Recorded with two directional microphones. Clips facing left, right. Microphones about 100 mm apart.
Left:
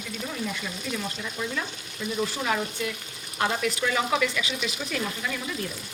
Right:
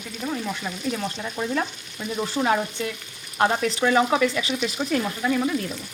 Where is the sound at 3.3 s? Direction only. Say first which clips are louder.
Right 5 dB; 40° right (ahead or behind).